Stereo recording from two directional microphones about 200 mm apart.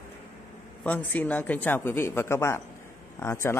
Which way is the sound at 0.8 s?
10° left (ahead or behind).